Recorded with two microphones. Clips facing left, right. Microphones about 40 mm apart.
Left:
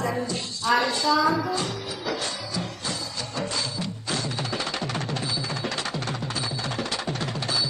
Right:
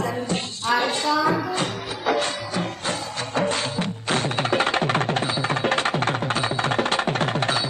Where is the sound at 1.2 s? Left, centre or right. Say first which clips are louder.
Right 1 dB; centre.